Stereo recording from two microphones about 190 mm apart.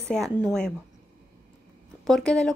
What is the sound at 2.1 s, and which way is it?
Speech, 5° left (ahead or behind).